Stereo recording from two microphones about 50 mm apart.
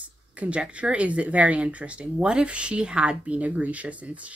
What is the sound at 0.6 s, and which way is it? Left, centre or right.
Speech, right.